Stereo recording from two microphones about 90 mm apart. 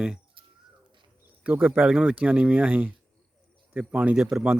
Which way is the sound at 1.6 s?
10° right (ahead or behind).